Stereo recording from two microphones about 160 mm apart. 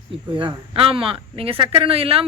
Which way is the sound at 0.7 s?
35° right (ahead or behind).